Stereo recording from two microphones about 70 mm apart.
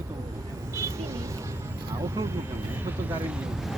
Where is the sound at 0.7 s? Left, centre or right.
Right.